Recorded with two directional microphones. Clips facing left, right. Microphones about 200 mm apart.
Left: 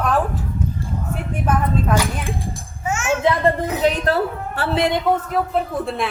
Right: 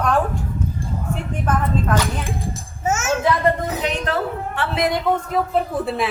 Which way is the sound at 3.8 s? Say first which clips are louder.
Left 4 dB; 40° left (ahead or behind).